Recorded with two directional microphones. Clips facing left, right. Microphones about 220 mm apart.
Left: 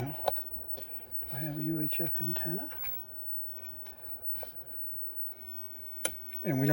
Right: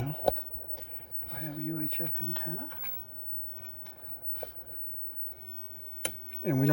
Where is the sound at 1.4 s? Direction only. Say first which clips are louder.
Left 2 dB; 30° left (ahead or behind).